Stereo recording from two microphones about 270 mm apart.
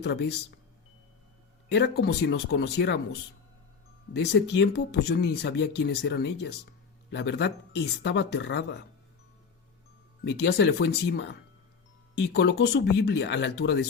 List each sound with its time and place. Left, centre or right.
0.0 s speech: left
1.7 s speech: left
10.2 s speech: left